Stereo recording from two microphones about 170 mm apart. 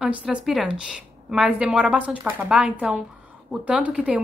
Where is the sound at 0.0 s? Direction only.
5° right (ahead or behind).